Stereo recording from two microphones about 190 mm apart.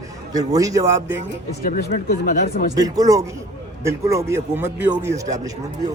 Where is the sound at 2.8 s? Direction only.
20° right (ahead or behind).